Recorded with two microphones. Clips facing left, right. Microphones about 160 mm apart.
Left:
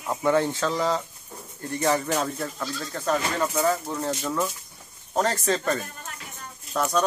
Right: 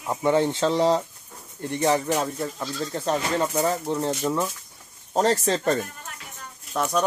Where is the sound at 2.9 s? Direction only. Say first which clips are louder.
Right 1 dB; 25° right (ahead or behind).